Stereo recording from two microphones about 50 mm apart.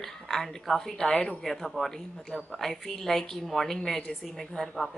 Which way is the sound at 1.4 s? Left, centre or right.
Centre.